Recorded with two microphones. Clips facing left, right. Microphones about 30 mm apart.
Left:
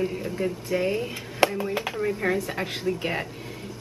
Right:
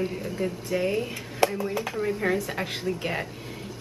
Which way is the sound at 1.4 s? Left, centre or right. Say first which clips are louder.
Left 2 dB; left.